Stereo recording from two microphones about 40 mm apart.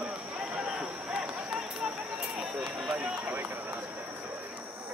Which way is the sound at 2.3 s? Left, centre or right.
Right.